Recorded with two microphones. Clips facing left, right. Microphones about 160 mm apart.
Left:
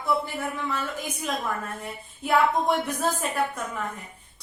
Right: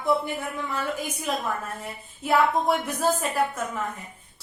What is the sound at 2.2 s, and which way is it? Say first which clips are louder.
A woman's voice: even; centre (ahead or behind).